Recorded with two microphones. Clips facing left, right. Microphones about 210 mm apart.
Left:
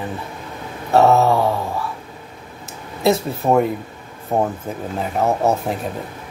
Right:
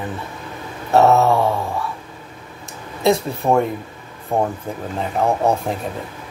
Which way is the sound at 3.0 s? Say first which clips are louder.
Even; 5° left (ahead or behind).